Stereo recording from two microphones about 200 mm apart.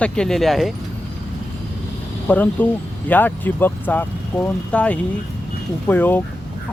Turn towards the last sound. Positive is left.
turn(degrees=10)  # may be behind; listen again after turning